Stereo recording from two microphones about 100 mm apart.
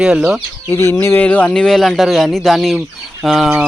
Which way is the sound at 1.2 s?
15° left (ahead or behind).